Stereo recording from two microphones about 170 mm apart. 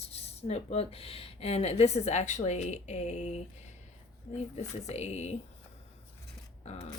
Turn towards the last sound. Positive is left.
turn(degrees=40)  # may be behind; listen again after turning